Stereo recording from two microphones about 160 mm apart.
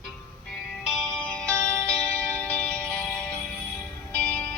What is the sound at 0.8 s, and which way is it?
Music, centre (ahead or behind).